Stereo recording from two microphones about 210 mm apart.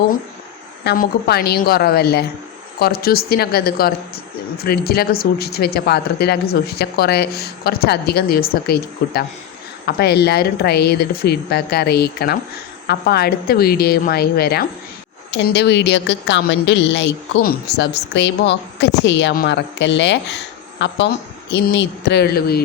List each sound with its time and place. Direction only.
0.9 s a woman's voice: 45° left (ahead or behind)